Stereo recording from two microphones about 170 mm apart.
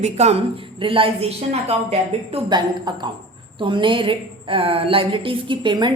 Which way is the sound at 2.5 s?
25° right (ahead or behind).